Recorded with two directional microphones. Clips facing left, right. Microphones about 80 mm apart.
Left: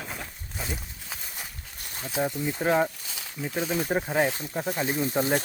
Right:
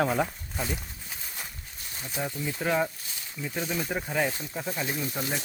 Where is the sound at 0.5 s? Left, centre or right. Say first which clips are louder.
Right 2 dB; centre.